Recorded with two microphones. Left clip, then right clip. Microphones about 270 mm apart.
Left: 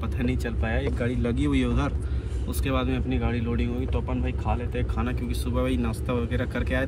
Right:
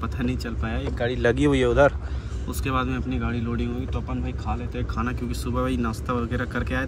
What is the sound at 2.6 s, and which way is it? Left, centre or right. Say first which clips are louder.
Speech: right 2 dB; left.